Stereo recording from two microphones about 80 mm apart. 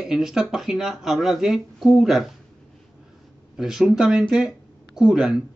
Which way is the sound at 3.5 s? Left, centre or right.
Centre.